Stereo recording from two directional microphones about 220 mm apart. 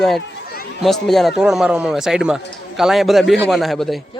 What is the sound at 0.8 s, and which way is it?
A man's voice, centre (ahead or behind).